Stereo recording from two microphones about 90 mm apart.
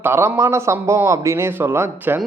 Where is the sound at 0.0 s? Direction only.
25° right (ahead or behind).